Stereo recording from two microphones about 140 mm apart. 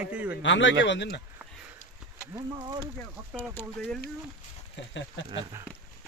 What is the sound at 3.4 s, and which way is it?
Speech, 15° left (ahead or behind).